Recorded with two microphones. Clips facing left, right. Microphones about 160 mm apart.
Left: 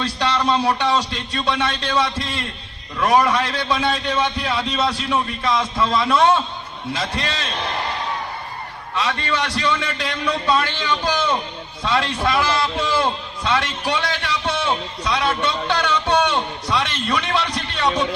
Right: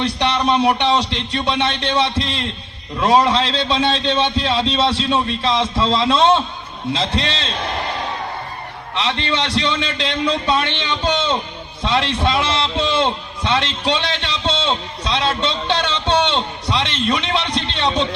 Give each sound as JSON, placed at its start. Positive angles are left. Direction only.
{"t": 0.0, "sound": "a man's voice", "side_deg": -20}
{"t": 9.0, "sound": "a man's voice", "side_deg": -25}